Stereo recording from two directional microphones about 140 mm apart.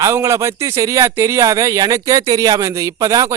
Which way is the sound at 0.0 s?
20° right (ahead or behind).